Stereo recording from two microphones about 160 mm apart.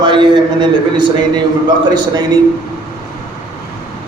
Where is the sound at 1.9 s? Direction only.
25° right (ahead or behind).